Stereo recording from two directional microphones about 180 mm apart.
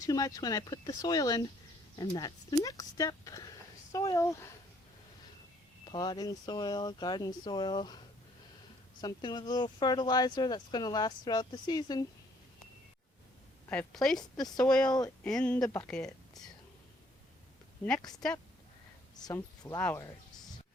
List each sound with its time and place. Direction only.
0.0 s speech: 20° left (ahead or behind)
5.8 s speech: 25° left (ahead or behind)
13.7 s a woman's voice: 5° left (ahead or behind)
14.8 s speech: 20° left (ahead or behind)
15.2 s a woman's voice: 5° left (ahead or behind)
15.5 s speech: 20° left (ahead or behind)
15.8 s speech: 5° left (ahead or behind)
19.2 s speech: 20° left (ahead or behind)